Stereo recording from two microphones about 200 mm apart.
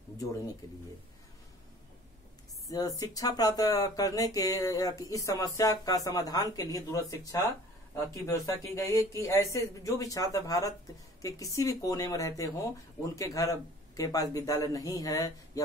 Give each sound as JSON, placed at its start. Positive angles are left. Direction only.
{"t": 2.7, "sound": "speech", "side_deg": 15}